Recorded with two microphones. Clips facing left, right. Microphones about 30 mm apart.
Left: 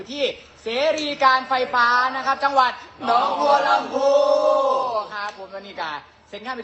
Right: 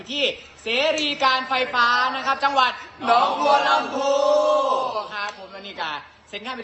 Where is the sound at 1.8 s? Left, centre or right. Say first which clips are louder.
Even; right.